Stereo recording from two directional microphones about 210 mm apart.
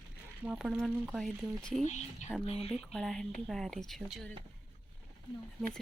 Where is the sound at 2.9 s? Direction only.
5° left (ahead or behind).